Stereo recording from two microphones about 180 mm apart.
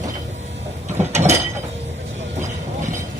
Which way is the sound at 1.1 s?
40° right (ahead or behind).